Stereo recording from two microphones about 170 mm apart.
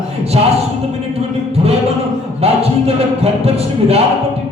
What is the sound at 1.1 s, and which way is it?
Music, 35° right (ahead or behind).